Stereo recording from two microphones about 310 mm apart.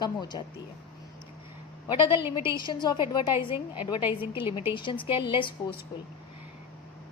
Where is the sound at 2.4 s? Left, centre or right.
Centre.